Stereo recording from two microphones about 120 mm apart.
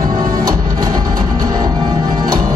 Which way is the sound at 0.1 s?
35° right (ahead or behind).